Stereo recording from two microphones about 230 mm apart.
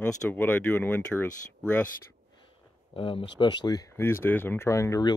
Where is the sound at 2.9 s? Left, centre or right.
Left.